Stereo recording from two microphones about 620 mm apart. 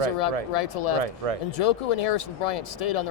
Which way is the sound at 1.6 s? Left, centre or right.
Left.